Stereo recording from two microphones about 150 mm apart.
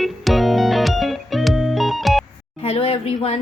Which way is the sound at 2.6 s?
40° left (ahead or behind).